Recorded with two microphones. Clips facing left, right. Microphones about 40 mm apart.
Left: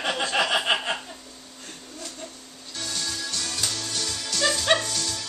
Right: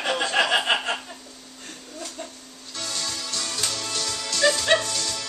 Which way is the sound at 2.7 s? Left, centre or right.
Centre.